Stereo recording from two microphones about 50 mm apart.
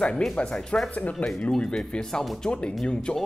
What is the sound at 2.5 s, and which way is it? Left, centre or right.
Speech, left.